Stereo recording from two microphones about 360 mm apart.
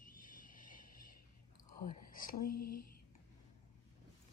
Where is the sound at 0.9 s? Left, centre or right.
Left.